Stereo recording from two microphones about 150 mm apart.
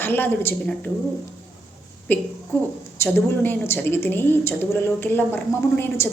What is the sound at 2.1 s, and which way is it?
A woman's voice, 10° left (ahead or behind).